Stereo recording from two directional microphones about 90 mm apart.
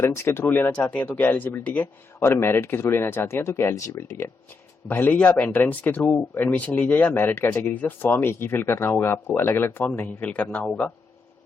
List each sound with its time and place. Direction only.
0.0 s speech: 30° left (ahead or behind)
4.9 s speech: 20° left (ahead or behind)